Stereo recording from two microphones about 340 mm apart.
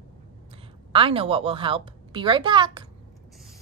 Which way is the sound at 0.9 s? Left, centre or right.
Centre.